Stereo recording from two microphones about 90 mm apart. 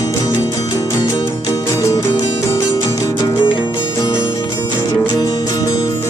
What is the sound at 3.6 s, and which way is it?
Music, 30° left (ahead or behind).